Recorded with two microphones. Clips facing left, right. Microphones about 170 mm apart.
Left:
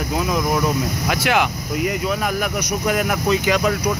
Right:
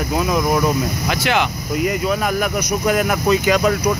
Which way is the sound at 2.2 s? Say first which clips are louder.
Right 3 dB; 45° right (ahead or behind).